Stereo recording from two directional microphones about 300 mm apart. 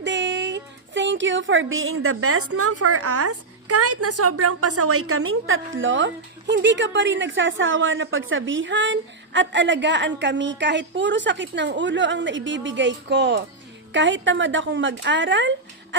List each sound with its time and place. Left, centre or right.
0.0 s a woman's voice: right